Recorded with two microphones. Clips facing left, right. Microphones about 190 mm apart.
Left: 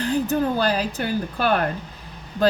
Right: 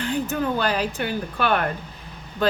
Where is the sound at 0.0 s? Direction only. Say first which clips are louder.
Left 3 dB; 35° left (ahead or behind).